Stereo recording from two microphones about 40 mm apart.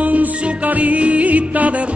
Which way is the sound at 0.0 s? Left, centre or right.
Right.